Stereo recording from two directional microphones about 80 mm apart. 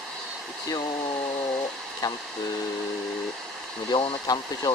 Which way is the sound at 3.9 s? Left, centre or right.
Left.